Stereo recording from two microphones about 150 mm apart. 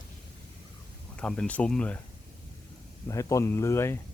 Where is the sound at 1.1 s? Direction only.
5° left (ahead or behind).